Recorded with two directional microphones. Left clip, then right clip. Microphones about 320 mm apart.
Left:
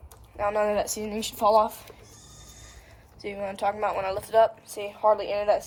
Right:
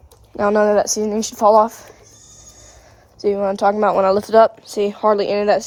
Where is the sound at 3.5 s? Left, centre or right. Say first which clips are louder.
Right 9 dB; centre.